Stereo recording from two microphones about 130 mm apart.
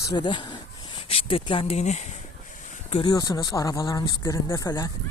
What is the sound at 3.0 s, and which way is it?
Speech, 30° left (ahead or behind).